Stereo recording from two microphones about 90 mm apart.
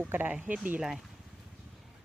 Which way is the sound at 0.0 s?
20° right (ahead or behind).